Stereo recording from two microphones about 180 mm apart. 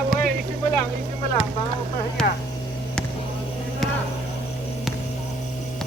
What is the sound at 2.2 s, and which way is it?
Speech, 5° left (ahead or behind).